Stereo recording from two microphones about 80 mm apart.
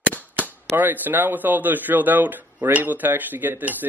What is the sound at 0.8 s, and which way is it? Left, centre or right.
Speech, right.